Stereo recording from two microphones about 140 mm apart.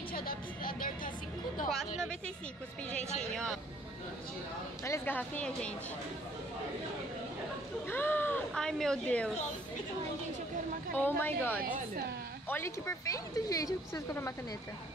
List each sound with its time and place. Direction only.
0.1 s a sound: 90° left
3.2 s speech: 5° left (ahead or behind)
4.8 s speech: 15° left (ahead or behind)
7.9 s speech: 15° left (ahead or behind)
11.0 s speech: 15° left (ahead or behind)
11.6 s speech: 80° right
12.4 s speech: 20° left (ahead or behind)